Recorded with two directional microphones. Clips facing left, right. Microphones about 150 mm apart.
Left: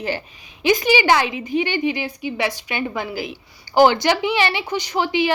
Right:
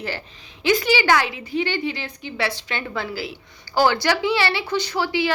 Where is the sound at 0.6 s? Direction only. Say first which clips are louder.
Left 2 dB; 15° left (ahead or behind).